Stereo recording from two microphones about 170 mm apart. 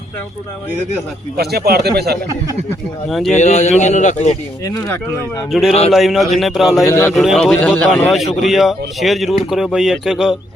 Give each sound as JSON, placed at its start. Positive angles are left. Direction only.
{"t": 1.4, "sound": "speech", "side_deg": -70}
{"t": 3.1, "sound": "speech", "side_deg": 0}
{"t": 3.3, "sound": "a man's voice", "side_deg": 45}
{"t": 4.6, "sound": "speech", "side_deg": 20}
{"t": 5.5, "sound": "speech", "side_deg": 0}
{"t": 6.8, "sound": "a man's voice", "side_deg": 15}
{"t": 7.1, "sound": "speech", "side_deg": 0}